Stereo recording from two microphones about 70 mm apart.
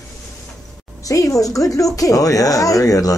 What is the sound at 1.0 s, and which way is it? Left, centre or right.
A woman's voice, left.